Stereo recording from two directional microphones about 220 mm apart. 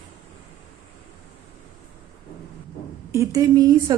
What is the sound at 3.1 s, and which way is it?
Speech, 15° right (ahead or behind).